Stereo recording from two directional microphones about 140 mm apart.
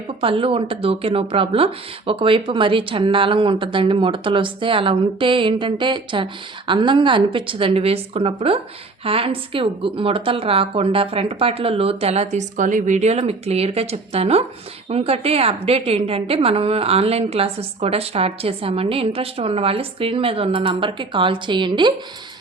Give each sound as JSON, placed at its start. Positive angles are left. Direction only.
{"t": 0.2, "sound": "a woman's voice", "side_deg": -40}